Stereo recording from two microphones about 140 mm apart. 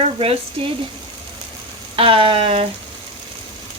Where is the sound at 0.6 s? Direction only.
35° right (ahead or behind).